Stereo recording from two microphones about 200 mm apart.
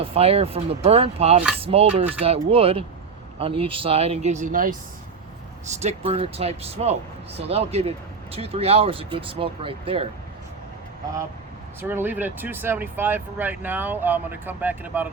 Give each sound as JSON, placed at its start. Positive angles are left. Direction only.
{"t": 0.0, "sound": "speech", "side_deg": -30}
{"t": 5.8, "sound": "speech", "side_deg": -30}
{"t": 11.8, "sound": "speech", "side_deg": -10}